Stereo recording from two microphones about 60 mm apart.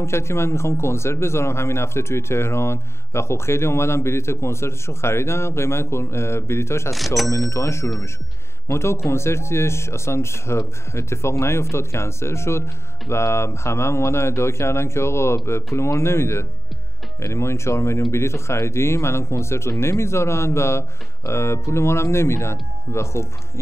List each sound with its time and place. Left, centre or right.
0.0 s a man's voice: left
7.2 s a man's voice: left